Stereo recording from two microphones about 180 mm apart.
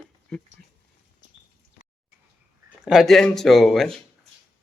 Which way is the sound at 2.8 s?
Centre (ahead or behind).